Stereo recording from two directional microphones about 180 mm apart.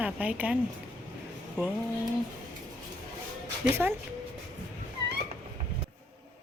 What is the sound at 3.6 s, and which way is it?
Speech, 10° right (ahead or behind).